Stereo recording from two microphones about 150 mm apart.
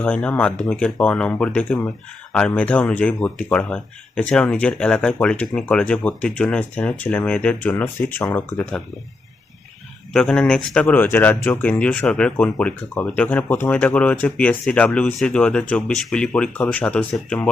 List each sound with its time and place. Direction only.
0.0 s speech: 10° left (ahead or behind)
10.1 s speech: 5° left (ahead or behind)